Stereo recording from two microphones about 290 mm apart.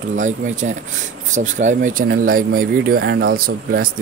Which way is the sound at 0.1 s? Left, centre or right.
Right.